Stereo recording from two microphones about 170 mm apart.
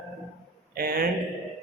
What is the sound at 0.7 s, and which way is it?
Speech, 60° right (ahead or behind).